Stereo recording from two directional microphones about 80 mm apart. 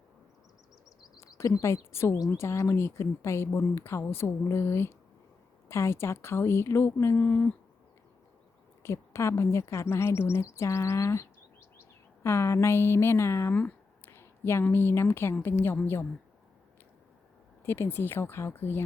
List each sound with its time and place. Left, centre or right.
1.0 s a sound: left
1.4 s speech: left
2.1 s speech: left
7.2 s speech: left
8.8 s a woman's voice: left
17.7 s speech: left